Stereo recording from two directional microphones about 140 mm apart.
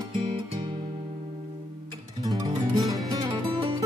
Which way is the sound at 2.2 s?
30° right (ahead or behind).